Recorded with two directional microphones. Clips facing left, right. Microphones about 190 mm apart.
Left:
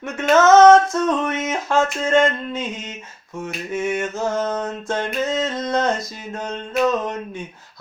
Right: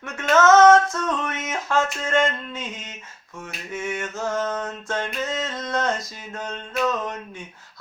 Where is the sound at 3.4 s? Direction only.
15° left (ahead or behind).